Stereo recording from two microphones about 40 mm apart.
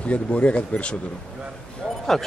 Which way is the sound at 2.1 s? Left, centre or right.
Centre.